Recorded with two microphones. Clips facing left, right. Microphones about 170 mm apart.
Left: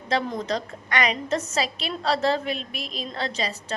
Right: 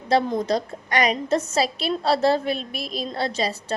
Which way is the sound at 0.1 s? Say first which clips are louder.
Right 5 dB; 30° right (ahead or behind).